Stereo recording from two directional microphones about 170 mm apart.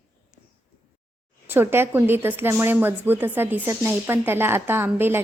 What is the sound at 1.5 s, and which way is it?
Speech, 10° right (ahead or behind).